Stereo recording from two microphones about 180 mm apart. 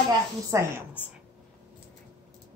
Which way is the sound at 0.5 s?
15° right (ahead or behind).